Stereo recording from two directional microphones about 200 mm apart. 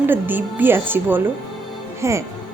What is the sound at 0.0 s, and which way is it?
A woman's voice, 10° right (ahead or behind).